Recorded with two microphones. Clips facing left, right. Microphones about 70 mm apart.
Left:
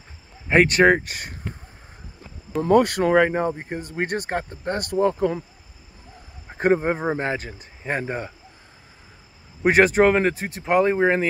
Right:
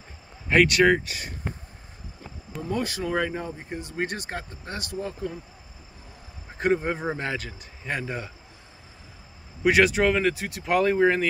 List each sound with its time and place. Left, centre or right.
0.5 s speech: left
2.6 s speech: left
6.6 s speech: left
9.6 s speech: left